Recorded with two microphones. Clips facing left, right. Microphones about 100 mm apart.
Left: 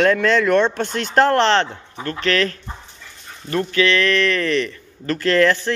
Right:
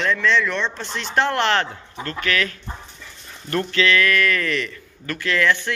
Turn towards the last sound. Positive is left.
turn(degrees=40)  # may be behind; listen again after turning